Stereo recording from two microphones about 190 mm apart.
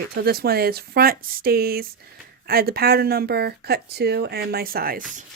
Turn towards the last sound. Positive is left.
turn(degrees=-50)  # may be behind; listen again after turning